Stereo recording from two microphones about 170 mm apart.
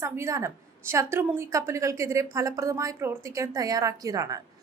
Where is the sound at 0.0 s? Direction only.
15° right (ahead or behind).